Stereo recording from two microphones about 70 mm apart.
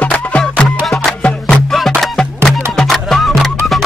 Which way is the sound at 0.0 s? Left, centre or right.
Centre.